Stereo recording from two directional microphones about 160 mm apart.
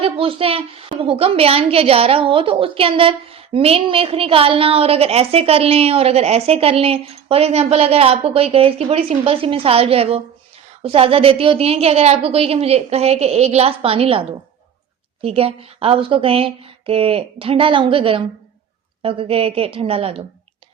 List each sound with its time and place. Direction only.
0.0 s a woman's voice: 35° right (ahead or behind)